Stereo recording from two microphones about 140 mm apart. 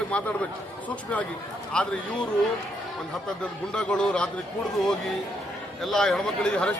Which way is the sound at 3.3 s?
5° left (ahead or behind).